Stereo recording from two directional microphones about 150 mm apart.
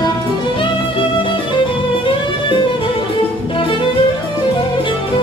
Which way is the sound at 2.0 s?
35° left (ahead or behind).